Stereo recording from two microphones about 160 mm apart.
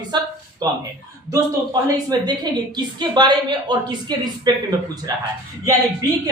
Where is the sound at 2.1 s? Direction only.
25° right (ahead or behind).